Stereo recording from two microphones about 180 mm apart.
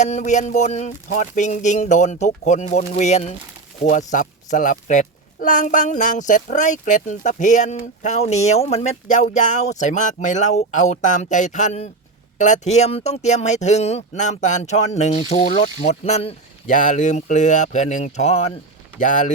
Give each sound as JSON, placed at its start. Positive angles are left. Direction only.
{"t": 0.0, "sound": "speech", "side_deg": 40}
{"t": 18.9, "sound": "speech", "side_deg": 45}